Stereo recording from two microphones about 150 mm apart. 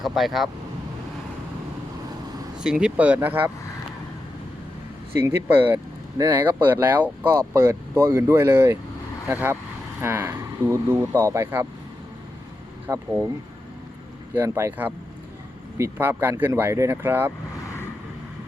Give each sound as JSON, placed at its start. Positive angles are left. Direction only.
{"t": 0.0, "sound": "speech", "side_deg": 0}
{"t": 2.6, "sound": "speech", "side_deg": -5}
{"t": 5.2, "sound": "speech", "side_deg": -15}
{"t": 12.9, "sound": "speech", "side_deg": -20}
{"t": 14.3, "sound": "speech", "side_deg": -20}